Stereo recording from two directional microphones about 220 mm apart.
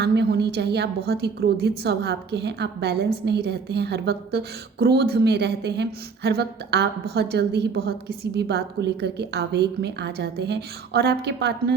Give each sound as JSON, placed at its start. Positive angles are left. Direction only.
{"t": 0.0, "sound": "a woman's voice", "side_deg": -50}